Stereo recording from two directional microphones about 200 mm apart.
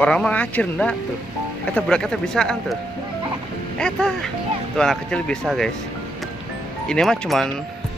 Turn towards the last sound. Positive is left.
turn(degrees=0)  # may be behind; listen again after turning